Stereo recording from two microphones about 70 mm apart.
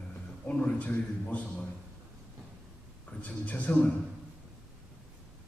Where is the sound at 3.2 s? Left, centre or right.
Left.